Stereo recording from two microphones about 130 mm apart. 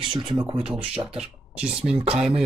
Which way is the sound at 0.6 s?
5° right (ahead or behind).